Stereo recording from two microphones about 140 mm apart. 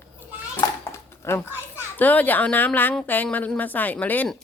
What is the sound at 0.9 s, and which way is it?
Dog, 20° left (ahead or behind).